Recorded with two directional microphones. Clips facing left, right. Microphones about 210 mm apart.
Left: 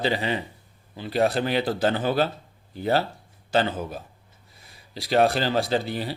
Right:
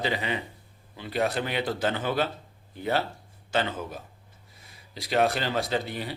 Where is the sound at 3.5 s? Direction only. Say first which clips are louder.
Left 5 dB; 35° left (ahead or behind).